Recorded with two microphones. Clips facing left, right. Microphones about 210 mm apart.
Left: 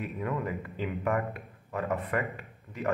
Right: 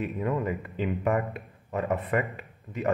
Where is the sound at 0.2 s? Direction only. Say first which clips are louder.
Right 3 dB; 20° right (ahead or behind).